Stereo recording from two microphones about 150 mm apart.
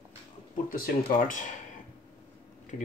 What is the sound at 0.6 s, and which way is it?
Speech, 70° left (ahead or behind).